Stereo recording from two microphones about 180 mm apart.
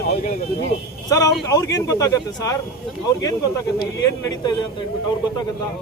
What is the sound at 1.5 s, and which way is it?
Speech, 20° left (ahead or behind).